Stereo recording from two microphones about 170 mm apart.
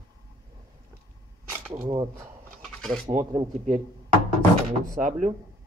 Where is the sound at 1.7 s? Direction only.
20° right (ahead or behind).